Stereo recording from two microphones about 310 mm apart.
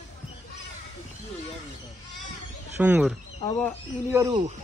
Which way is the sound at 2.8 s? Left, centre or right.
Centre.